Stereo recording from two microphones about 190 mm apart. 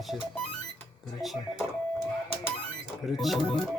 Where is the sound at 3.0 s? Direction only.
Centre (ahead or behind).